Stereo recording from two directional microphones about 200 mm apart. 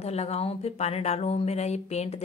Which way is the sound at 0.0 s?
30° left (ahead or behind).